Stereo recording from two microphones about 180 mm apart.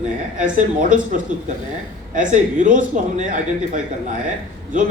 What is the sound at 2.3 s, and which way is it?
Speech, 45° right (ahead or behind).